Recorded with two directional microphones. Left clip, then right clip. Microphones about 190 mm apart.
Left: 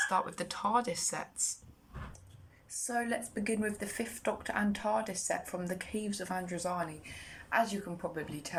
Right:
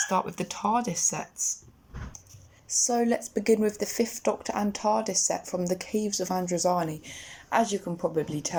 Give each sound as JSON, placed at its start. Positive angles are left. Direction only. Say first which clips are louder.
{"t": 0.1, "sound": "speech", "louder": "right 5 dB", "side_deg": -15}
{"t": 2.8, "sound": "speech", "louder": "right 8 dB", "side_deg": -30}